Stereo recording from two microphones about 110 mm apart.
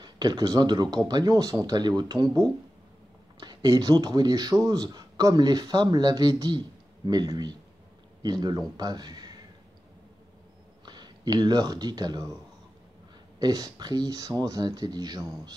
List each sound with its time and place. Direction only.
0.0 s speech: 40° right (ahead or behind)
10.9 s speech: 40° right (ahead or behind)
13.4 s speech: 35° right (ahead or behind)